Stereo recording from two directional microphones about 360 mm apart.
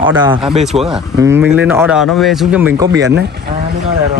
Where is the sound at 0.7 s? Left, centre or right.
Centre.